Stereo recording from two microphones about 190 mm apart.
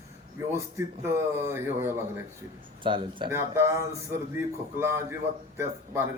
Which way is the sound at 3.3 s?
15° right (ahead or behind).